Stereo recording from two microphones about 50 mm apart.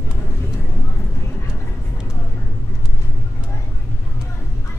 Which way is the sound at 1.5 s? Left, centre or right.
Centre.